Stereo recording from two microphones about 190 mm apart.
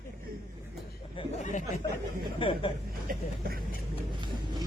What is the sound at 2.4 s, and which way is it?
Speech, 25° left (ahead or behind).